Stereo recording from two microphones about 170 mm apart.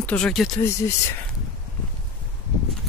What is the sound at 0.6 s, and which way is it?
Speech, 15° left (ahead or behind).